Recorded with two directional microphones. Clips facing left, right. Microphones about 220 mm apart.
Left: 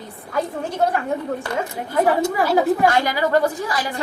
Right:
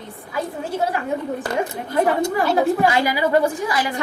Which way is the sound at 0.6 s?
5° right (ahead or behind).